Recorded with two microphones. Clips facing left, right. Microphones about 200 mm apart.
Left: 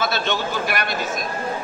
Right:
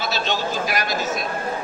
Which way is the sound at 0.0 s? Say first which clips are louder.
Left 1 dB; 55° left (ahead or behind).